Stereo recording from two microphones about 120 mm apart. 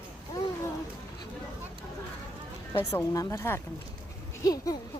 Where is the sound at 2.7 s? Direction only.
25° left (ahead or behind).